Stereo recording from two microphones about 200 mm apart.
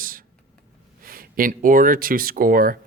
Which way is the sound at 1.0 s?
45° right (ahead or behind).